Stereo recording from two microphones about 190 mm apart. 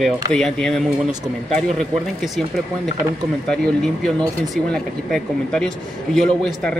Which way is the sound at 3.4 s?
5° left (ahead or behind).